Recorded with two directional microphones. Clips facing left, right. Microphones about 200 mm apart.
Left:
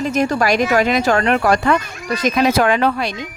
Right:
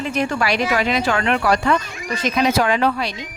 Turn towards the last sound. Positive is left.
turn(degrees=50)  # may be behind; listen again after turning